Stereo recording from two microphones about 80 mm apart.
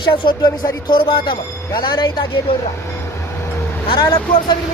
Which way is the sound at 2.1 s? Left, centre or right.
Left.